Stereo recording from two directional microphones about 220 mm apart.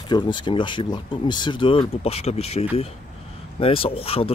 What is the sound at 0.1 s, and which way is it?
Speech, 20° left (ahead or behind).